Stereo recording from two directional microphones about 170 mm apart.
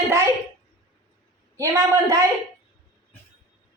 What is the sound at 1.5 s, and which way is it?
Speech, 20° right (ahead or behind).